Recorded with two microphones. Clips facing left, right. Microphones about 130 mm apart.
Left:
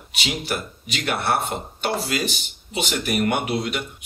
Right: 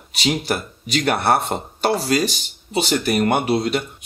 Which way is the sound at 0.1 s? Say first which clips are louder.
Right 6 dB; 35° right (ahead or behind).